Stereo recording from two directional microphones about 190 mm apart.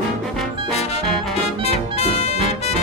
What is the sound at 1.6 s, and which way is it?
Brass instrument, 35° left (ahead or behind).